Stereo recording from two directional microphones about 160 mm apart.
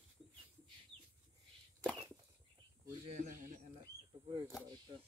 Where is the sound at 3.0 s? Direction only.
50° right (ahead or behind).